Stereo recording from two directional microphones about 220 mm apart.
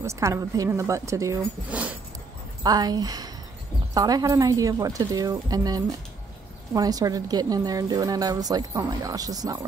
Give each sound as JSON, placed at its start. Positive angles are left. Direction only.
{"t": 0.0, "sound": "speech", "side_deg": -15}
{"t": 2.6, "sound": "speech", "side_deg": -20}